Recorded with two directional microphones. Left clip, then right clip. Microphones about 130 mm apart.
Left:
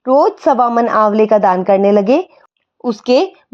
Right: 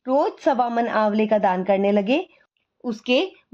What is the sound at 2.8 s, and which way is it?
Speech, 60° left (ahead or behind).